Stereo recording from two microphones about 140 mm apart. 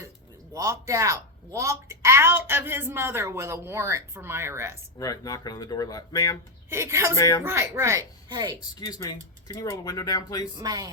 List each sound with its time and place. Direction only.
0.5 s speech: 20° right (ahead or behind)
4.9 s speech: 25° left (ahead or behind)
6.7 s speech: 20° right (ahead or behind)
7.2 s speech: 25° left (ahead or behind)
7.4 s speech: 20° right (ahead or behind)
8.3 s speech: 30° right (ahead or behind)
8.9 s speech: 25° left (ahead or behind)
10.5 s speech: 30° right (ahead or behind)